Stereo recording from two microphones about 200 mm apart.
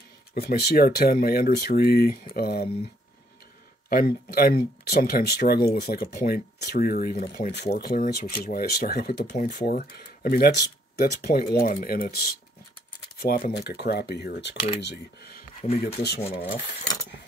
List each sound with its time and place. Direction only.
0.3 s speech: 50° left (ahead or behind)
3.9 s speech: 50° left (ahead or behind)
16.2 s speech: 30° left (ahead or behind)